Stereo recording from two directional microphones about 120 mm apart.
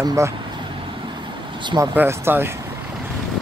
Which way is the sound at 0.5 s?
45° right (ahead or behind).